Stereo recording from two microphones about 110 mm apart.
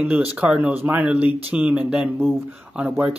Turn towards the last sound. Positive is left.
turn(degrees=-10)  # may be behind; listen again after turning